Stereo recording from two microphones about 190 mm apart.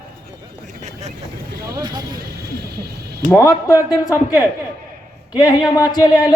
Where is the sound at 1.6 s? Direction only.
20° right (ahead or behind).